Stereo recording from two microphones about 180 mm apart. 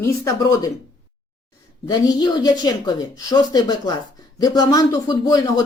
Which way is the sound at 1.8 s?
20° left (ahead or behind).